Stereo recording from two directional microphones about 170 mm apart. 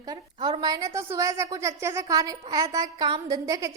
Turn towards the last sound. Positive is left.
turn(degrees=-20)  # may be behind; listen again after turning